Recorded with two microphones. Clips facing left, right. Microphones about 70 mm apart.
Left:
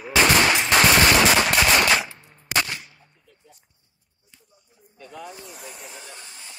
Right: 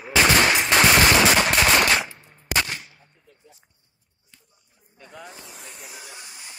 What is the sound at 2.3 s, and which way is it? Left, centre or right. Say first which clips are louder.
Gunshot: even; centre.